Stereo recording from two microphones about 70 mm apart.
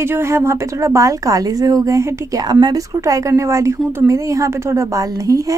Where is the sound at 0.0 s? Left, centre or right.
Right.